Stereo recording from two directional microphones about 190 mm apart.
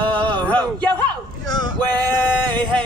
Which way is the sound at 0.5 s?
5° left (ahead or behind).